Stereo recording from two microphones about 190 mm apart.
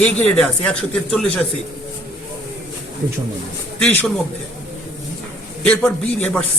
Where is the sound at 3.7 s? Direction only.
5° left (ahead or behind).